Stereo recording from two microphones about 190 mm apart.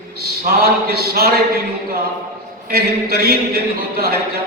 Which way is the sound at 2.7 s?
55° right (ahead or behind).